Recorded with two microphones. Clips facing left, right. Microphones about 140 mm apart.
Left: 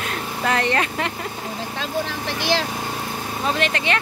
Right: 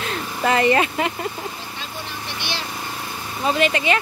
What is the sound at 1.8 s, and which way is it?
Speech, 90° left.